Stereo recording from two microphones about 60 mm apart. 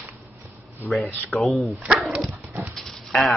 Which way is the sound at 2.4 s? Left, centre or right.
Right.